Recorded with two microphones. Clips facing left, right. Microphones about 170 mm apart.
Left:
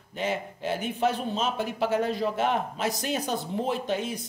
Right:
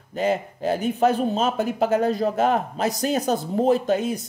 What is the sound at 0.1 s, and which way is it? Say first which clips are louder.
Speech: right 7 dB; 40° right (ahead or behind).